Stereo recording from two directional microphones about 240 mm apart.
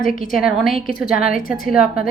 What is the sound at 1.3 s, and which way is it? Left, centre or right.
Speech, left.